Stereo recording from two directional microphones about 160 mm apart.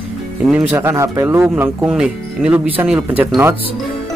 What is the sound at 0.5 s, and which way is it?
Speech, 10° right (ahead or behind).